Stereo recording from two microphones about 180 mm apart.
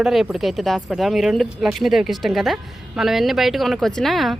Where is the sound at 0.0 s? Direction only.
Centre (ahead or behind).